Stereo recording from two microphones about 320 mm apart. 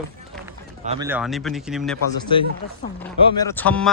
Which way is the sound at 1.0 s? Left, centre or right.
Centre.